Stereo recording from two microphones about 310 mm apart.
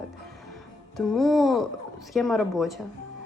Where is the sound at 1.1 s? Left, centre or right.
Centre.